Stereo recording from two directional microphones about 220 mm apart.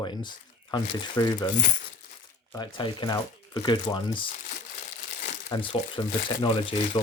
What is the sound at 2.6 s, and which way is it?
Speech, 20° left (ahead or behind).